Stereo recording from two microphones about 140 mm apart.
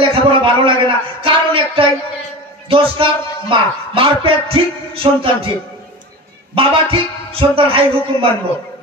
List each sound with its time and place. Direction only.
0.0 s a sound: 40° right (ahead or behind)
2.7 s a man's voice: 40° right (ahead or behind)
6.5 s a man's voice: 40° right (ahead or behind)